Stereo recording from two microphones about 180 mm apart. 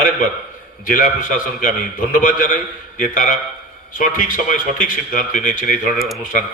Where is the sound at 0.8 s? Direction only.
50° left (ahead or behind).